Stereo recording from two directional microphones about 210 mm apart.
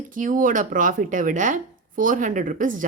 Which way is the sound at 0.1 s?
40° right (ahead or behind).